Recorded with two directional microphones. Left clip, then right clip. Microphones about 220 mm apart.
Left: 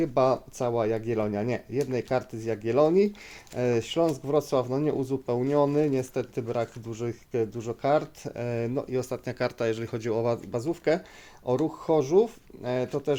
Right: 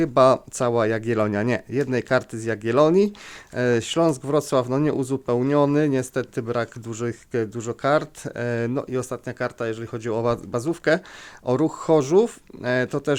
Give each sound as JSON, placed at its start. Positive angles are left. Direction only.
{"t": 0.0, "sound": "speech", "side_deg": -30}
{"t": 10.1, "sound": "speech", "side_deg": -25}